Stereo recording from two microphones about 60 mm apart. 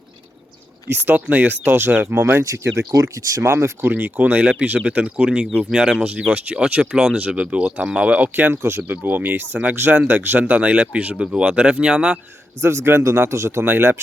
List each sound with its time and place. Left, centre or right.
1.1 s speech: right
2.1 s speech: right
2.4 s speech: right
3.0 s speech: right
3.4 s speech: right
3.9 s speech: right
8.3 s speech: right
8.5 s speech: right
8.9 s speech: right; by 12.2 s centre
12.6 s speech: right
13.7 s speech: right